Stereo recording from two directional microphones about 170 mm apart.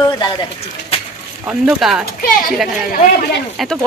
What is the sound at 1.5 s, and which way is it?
Speech, 5° right (ahead or behind).